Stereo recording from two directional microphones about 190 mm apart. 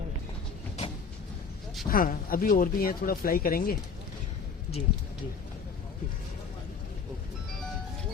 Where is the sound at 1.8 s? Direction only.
50° left (ahead or behind).